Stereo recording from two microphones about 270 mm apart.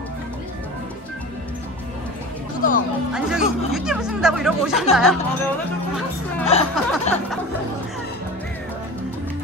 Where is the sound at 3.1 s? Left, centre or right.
Centre.